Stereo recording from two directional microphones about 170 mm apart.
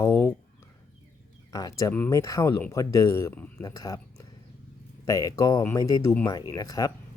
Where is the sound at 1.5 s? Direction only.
20° left (ahead or behind).